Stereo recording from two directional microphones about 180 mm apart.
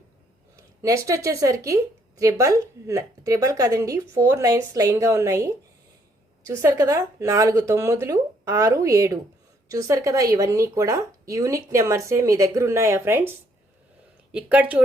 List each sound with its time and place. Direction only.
0.5 s speech: 15° right (ahead or behind)
14.3 s speech: 10° right (ahead or behind)